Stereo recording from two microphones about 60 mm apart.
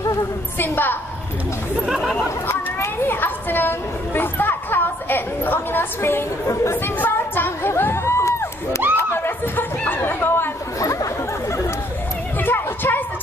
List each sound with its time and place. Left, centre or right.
0.6 s a woman's voice: left
1.9 s chatter: centre
2.2 s a sound: left
6.5 s speech: left
6.8 s a sound: left
8.9 s chatter: left
10.8 s chatter: left
12.4 s music: left